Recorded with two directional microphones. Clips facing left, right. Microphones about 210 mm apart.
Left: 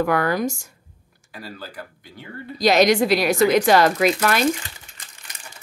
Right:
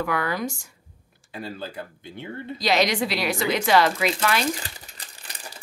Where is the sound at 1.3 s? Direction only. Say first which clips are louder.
Right 3 dB; 25° right (ahead or behind).